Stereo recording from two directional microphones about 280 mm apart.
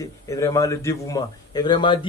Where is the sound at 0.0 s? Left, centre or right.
Centre.